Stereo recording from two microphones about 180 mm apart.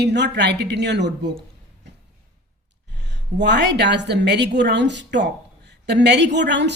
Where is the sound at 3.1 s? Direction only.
75° right (ahead or behind).